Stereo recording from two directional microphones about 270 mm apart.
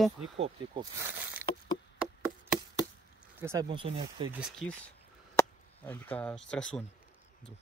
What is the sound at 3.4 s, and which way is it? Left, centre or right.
Speech, centre.